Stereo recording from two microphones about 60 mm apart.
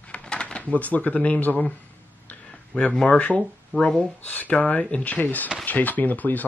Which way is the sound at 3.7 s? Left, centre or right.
Left.